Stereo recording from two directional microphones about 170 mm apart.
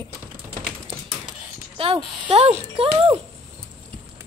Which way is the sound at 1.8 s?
30° right (ahead or behind).